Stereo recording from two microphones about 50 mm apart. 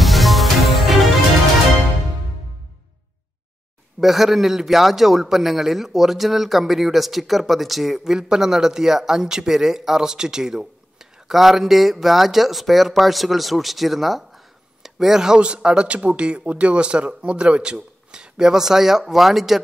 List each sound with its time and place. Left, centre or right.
0.0 s music: centre
4.0 s a man's voice: centre